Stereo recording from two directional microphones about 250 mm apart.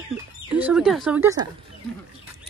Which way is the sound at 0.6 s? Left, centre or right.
Centre.